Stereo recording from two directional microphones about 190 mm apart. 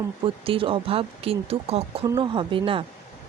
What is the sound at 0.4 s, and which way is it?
Speech, 30° right (ahead or behind).